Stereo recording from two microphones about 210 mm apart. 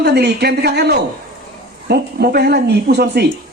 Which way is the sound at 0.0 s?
50° right (ahead or behind).